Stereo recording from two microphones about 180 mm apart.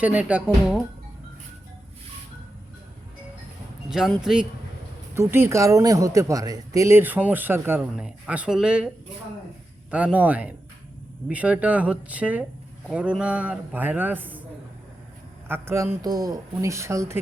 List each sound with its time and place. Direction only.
0.0 s speech: 10° right (ahead or behind)
3.8 s speech: centre (ahead or behind)
5.1 s speech: 15° right (ahead or behind)
9.9 s speech: 10° right (ahead or behind)
15.4 s speech: 15° right (ahead or behind)